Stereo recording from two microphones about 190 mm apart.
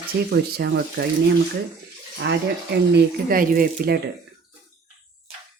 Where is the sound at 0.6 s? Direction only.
55° right (ahead or behind).